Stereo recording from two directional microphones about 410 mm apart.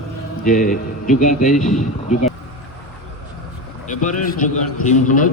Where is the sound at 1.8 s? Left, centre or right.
Centre.